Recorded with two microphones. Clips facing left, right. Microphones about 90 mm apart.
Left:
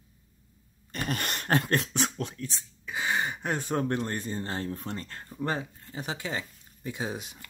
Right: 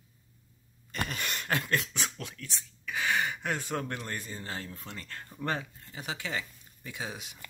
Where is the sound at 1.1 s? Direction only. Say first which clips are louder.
Left 7 dB; 50° left (ahead or behind).